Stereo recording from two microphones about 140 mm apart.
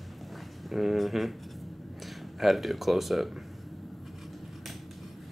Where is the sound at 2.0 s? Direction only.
Centre (ahead or behind).